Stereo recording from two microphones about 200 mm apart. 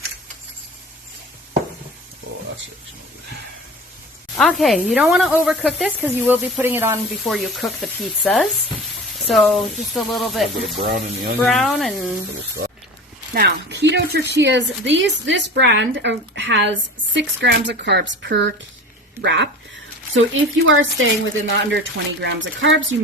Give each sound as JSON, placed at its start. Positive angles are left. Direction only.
{"t": 4.4, "sound": "speech", "side_deg": 0}
{"t": 7.3, "sound": "speech", "side_deg": 0}
{"t": 10.8, "sound": "speech", "side_deg": -45}
{"t": 11.3, "sound": "speech", "side_deg": 0}
{"t": 13.3, "sound": "a woman's voice", "side_deg": -50}